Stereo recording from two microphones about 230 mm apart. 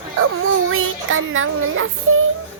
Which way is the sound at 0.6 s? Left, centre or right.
Right.